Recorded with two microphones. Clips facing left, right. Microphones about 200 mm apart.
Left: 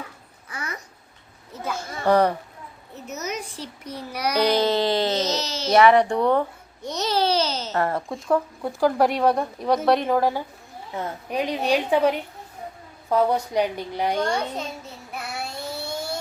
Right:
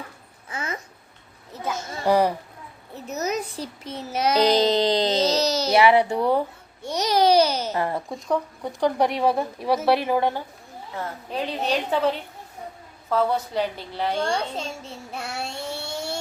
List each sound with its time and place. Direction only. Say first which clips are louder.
0.5 s a sound: right 3 dB; 25° right (ahead or behind)
2.0 s speech: left 1 dB; 10° right (ahead or behind)
3.8 s a child's voice: right 4 dB; 25° right (ahead or behind)
5.2 s a child's voice: right 5 dB; 35° right (ahead or behind)
5.8 s speech: left 3 dB; 5° right (ahead or behind)
6.8 s babbling: right 3 dB; 10° right (ahead or behind)
7.8 s speech: left 2 dB; centre (ahead or behind)
10.9 s a woman's voice: left 3 dB; 15° left (ahead or behind)
14.3 s a child's voice: even; 30° right (ahead or behind)
15.1 s a sound: even; 30° right (ahead or behind)